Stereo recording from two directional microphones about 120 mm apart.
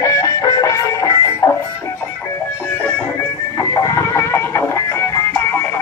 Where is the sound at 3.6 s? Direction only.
25° left (ahead or behind).